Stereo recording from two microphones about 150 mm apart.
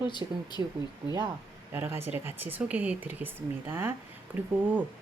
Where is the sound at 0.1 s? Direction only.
30° left (ahead or behind).